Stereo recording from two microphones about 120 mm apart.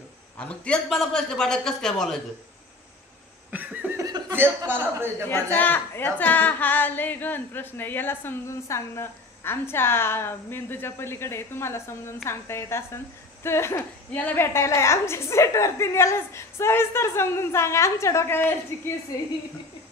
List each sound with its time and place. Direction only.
0.4 s a man's voice: 10° left (ahead or behind)
3.5 s a sound: 15° right (ahead or behind)
4.3 s a man's voice: 15° right (ahead or behind)
5.3 s a woman's voice: 15° left (ahead or behind)